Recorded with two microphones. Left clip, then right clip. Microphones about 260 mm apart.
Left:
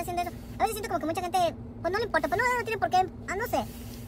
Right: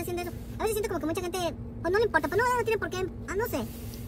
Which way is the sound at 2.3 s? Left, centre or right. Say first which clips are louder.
Right 1 dB; centre.